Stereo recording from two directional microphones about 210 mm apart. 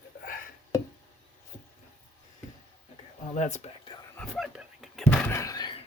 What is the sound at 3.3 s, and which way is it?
Whispering, 35° left (ahead or behind).